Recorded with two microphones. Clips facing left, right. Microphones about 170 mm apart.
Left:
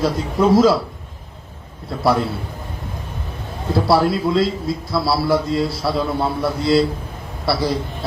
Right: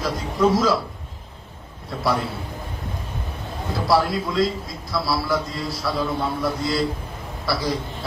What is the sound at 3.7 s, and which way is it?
A man's voice, 30° left (ahead or behind).